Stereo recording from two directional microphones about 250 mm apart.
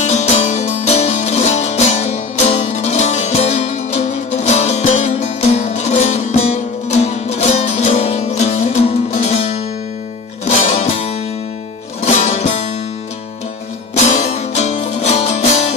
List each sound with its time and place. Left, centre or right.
0.0 s music: left
10.4 s music: left
13.9 s music: left